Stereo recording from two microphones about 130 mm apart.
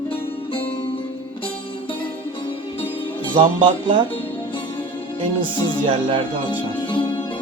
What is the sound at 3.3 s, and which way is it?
Speech, 35° right (ahead or behind).